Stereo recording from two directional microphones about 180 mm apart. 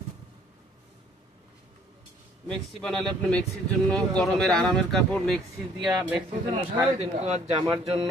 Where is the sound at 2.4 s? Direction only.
5° left (ahead or behind).